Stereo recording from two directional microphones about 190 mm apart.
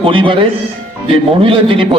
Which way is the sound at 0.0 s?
25° right (ahead or behind).